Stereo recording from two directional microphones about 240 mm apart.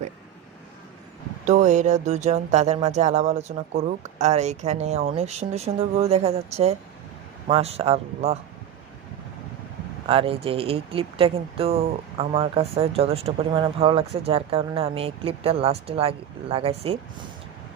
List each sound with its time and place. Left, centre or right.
1.5 s speech: right
10.1 s speech: right